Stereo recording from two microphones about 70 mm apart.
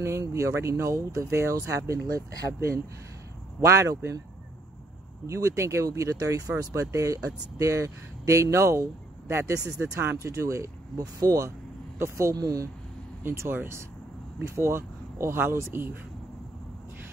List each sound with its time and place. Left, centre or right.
0.3 s speech: right
5.2 s speech: right
12.4 s speech: right
13.2 s speech: right